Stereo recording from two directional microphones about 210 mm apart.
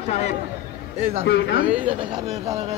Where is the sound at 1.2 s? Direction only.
55° left (ahead or behind).